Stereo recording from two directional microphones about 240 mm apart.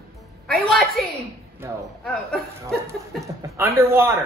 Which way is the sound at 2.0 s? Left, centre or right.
Centre.